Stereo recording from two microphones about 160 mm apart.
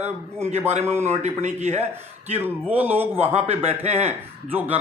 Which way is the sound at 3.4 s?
40° right (ahead or behind).